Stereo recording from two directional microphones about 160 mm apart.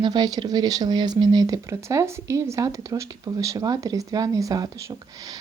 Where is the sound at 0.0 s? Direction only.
25° right (ahead or behind).